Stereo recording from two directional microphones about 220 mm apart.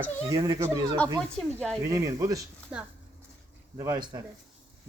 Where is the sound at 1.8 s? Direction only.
15° right (ahead or behind).